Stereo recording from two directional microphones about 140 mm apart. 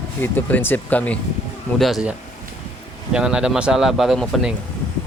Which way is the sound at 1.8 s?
Centre (ahead or behind).